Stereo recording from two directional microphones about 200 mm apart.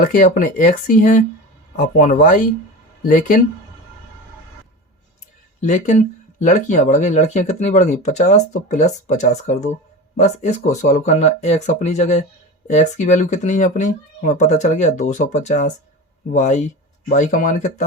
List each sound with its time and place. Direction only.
0.0 s speech: 40° left (ahead or behind)
5.5 s speech: 35° left (ahead or behind)